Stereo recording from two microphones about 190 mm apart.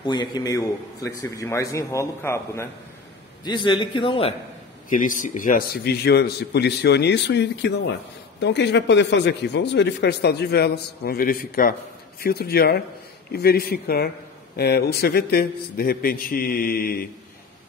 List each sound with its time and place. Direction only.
0.0 s a man's voice: 25° left (ahead or behind)
3.4 s a man's voice: 25° left (ahead or behind)
4.8 s a man's voice: 45° left (ahead or behind)